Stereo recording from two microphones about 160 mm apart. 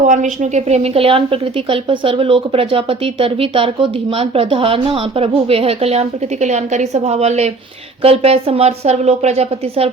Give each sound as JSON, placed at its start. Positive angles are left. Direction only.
{"t": 0.1, "sound": "a woman's voice", "side_deg": -50}